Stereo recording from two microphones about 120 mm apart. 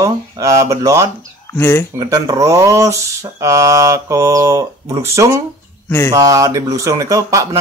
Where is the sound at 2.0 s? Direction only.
30° right (ahead or behind).